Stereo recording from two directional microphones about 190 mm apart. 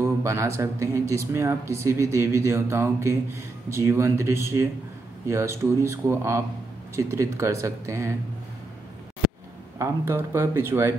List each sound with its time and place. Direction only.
0.2 s speech: 15° right (ahead or behind)
9.8 s speech: 10° right (ahead or behind)